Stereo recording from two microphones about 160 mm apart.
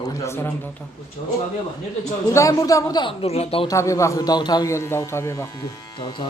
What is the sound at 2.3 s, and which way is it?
Speech, 20° left (ahead or behind).